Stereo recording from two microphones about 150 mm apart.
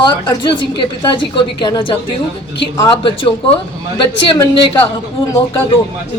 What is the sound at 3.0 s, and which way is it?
Speech, 35° left (ahead or behind).